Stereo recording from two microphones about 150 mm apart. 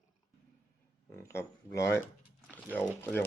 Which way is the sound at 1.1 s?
15° left (ahead or behind).